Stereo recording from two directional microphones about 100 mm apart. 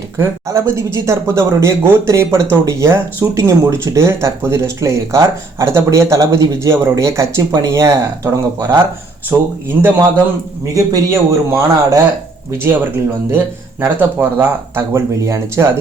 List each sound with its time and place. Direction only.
0.2 s speech: 30° right (ahead or behind)
13.9 s speech: 20° right (ahead or behind)